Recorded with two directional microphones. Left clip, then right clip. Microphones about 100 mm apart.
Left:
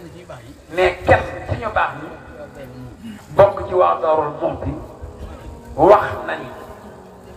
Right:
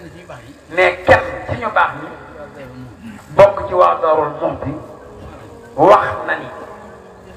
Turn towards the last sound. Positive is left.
turn(degrees=-40)  # may be behind; listen again after turning